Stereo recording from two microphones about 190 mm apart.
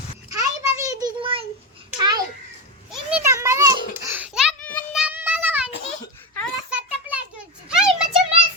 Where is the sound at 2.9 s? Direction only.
10° right (ahead or behind).